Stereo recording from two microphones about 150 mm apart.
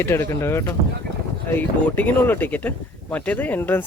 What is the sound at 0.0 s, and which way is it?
Speech, 15° left (ahead or behind).